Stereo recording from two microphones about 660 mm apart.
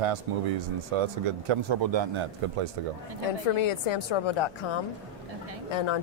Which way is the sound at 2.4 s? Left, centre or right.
Right.